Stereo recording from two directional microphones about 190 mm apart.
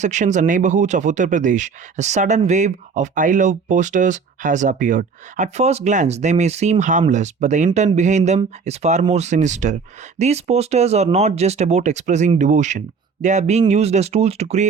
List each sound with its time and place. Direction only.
0.0 s speech: 40° right (ahead or behind)